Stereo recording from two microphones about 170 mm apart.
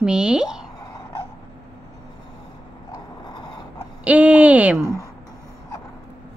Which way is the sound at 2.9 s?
25° left (ahead or behind).